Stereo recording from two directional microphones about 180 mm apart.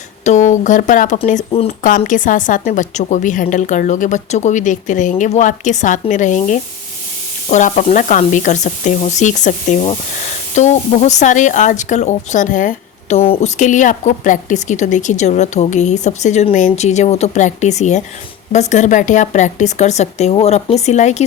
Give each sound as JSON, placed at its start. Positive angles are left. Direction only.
{"t": 0.3, "sound": "a woman's voice", "side_deg": 40}
{"t": 1.5, "sound": "speech", "side_deg": 30}
{"t": 2.0, "sound": "a woman's voice", "side_deg": 45}